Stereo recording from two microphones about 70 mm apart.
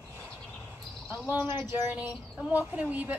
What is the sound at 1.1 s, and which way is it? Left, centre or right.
Speech, right.